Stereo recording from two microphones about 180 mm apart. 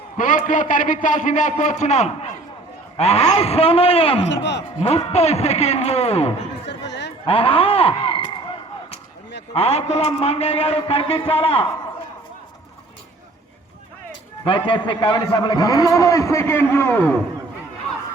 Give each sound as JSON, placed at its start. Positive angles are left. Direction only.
{"t": 0.2, "sound": "a man's voice", "side_deg": 45}
{"t": 6.7, "sound": "a sound", "side_deg": 75}
{"t": 7.3, "sound": "speech", "side_deg": 30}
{"t": 9.5, "sound": "a man's voice", "side_deg": 35}
{"t": 14.4, "sound": "a man's voice", "side_deg": 30}